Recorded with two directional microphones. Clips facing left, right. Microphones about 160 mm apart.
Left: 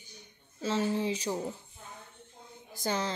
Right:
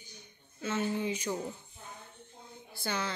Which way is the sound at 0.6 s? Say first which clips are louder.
Left 3 dB; 35° left (ahead or behind).